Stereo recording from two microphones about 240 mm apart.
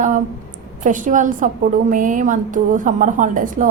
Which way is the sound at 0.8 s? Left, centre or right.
Right.